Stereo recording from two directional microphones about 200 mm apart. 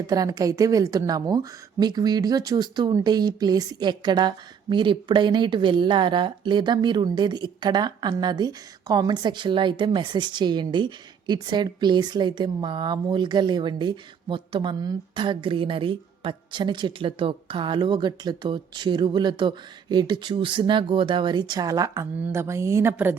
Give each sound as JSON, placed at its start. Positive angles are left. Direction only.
{"t": 0.1, "sound": "a woman's voice", "side_deg": -20}